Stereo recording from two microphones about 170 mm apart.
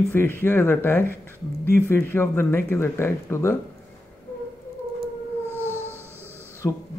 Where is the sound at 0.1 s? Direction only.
15° left (ahead or behind).